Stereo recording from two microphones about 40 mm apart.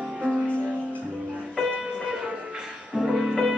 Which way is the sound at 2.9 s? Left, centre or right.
Centre.